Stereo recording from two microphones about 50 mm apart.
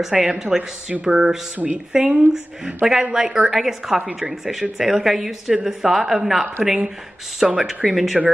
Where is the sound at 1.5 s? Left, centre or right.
Right.